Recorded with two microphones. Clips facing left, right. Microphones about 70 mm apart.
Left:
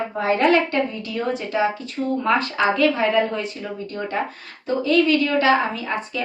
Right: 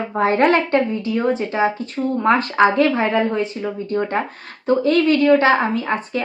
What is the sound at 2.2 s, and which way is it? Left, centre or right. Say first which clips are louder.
A woman's voice: right 6 dB; right.